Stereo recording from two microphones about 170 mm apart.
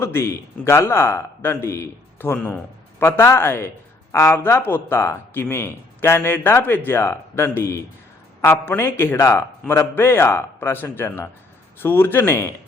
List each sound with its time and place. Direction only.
0.0 s speech: 15° left (ahead or behind)